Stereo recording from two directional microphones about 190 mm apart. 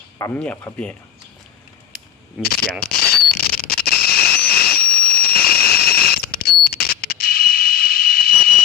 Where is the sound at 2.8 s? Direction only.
55° left (ahead or behind).